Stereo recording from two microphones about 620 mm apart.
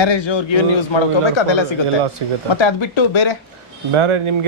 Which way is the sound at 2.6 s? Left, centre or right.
Left.